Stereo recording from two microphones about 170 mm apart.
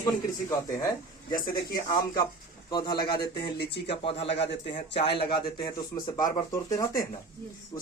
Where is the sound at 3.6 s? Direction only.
80° left.